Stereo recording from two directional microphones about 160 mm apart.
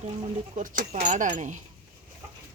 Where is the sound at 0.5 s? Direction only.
55° right (ahead or behind).